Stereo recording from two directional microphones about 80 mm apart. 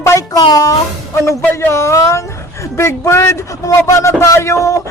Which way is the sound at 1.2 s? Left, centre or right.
Left.